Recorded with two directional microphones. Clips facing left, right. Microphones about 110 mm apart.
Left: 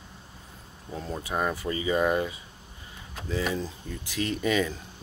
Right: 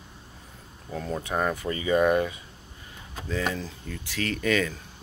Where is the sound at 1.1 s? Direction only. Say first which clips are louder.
Right 2 dB; 10° left (ahead or behind).